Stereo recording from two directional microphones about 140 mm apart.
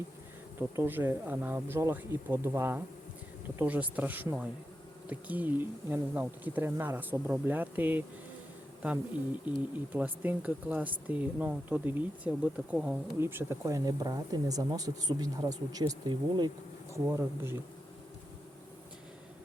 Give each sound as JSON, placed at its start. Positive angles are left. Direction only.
{"t": 0.8, "sound": "speech", "side_deg": -15}
{"t": 9.9, "sound": "speech", "side_deg": -10}